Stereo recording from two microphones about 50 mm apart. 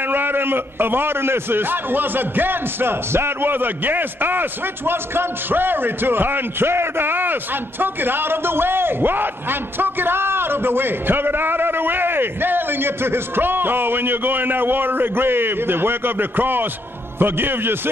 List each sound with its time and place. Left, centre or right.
0.0 s a man's voice: right